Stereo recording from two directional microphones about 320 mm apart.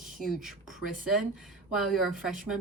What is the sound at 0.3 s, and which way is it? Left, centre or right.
Speech, centre.